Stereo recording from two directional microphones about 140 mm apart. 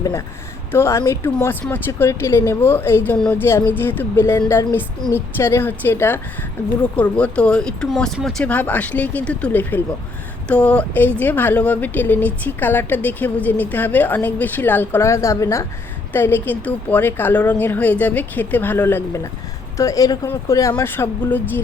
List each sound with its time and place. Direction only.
0.7 s speech: 20° left (ahead or behind)